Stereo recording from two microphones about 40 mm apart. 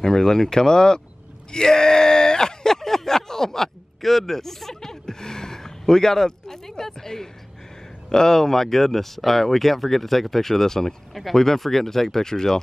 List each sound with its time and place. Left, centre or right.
0.0 s speech: centre
1.5 s groan: centre
8.1 s speech: centre